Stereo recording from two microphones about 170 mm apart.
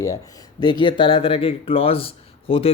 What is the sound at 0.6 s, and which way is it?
Speech, 25° left (ahead or behind).